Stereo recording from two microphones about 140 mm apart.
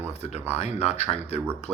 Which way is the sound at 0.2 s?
50° left (ahead or behind).